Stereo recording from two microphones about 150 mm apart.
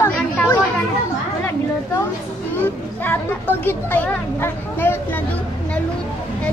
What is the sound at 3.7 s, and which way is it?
Speech, 10° left (ahead or behind).